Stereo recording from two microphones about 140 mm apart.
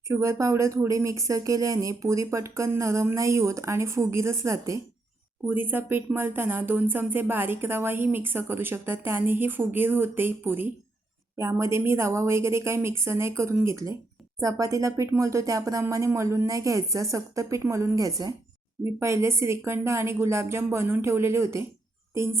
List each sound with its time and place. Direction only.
0.1 s speech: 20° right (ahead or behind)